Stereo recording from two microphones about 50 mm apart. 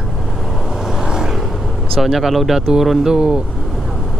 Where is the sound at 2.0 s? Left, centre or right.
Centre.